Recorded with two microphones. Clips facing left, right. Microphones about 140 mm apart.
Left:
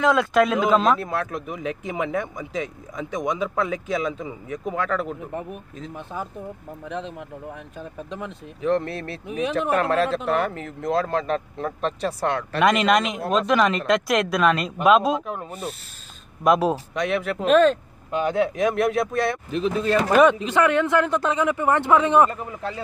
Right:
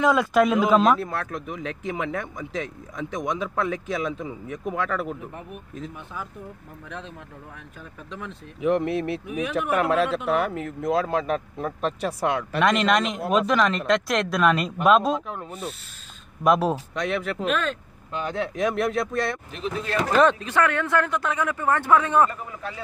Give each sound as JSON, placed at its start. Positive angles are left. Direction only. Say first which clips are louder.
{"t": 0.0, "sound": "speech", "louder": "left 1 dB", "side_deg": -5}
{"t": 6.1, "sound": "speech", "louder": "left 6 dB", "side_deg": 40}
{"t": 6.9, "sound": "speech", "louder": "left 7 dB", "side_deg": 20}
{"t": 8.5, "sound": "speech", "louder": "right 1 dB", "side_deg": -10}
{"t": 12.5, "sound": "speech", "louder": "left 3 dB", "side_deg": 5}
{"t": 13.6, "sound": "speech", "louder": "left 2 dB", "side_deg": 5}
{"t": 17.5, "sound": "speech", "louder": "left 11 dB", "side_deg": 35}
{"t": 18.1, "sound": "speech", "louder": "left 6 dB", "side_deg": 10}
{"t": 20.2, "sound": "speech", "louder": "left 2 dB", "side_deg": 15}